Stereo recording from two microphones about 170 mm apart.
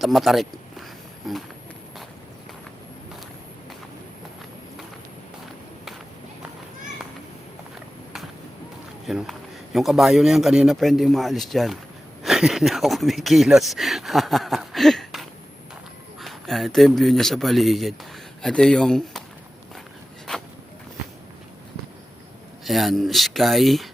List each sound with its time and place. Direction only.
0.0 s a man's voice: centre (ahead or behind)
9.0 s a man's voice: centre (ahead or behind)
22.6 s a man's voice: centre (ahead or behind)